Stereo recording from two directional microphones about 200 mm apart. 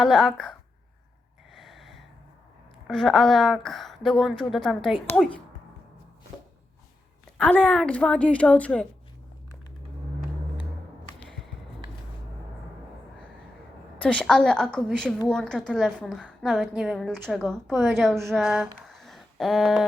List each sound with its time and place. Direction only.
0.0 s a woman's voice: centre (ahead or behind)
1.5 s a sound: centre (ahead or behind)
2.8 s a woman's voice: centre (ahead or behind)
7.3 s a woman's voice: 5° left (ahead or behind)
14.0 s a woman's voice: 5° left (ahead or behind)